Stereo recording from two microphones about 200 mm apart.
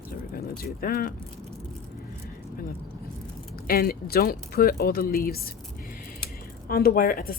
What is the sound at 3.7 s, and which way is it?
Speech, 50° left (ahead or behind).